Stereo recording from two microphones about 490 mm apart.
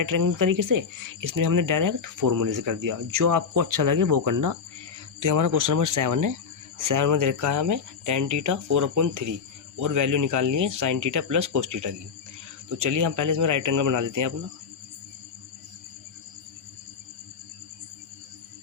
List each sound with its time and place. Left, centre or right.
0.0 s speech: right